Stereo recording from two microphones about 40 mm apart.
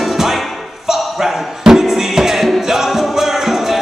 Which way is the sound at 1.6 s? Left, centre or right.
Centre.